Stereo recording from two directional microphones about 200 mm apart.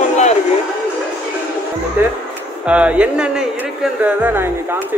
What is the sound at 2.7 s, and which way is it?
Speech, 5° right (ahead or behind).